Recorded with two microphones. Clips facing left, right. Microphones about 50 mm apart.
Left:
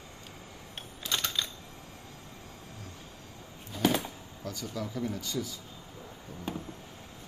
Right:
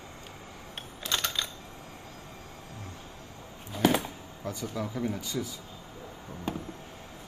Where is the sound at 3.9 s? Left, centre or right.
Right.